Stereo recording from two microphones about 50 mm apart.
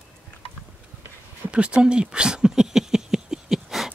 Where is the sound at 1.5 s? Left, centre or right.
Right.